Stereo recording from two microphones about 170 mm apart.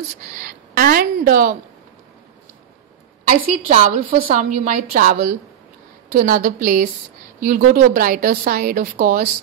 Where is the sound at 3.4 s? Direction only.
50° right (ahead or behind).